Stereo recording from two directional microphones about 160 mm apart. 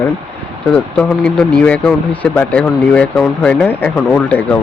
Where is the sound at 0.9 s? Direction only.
5° left (ahead or behind).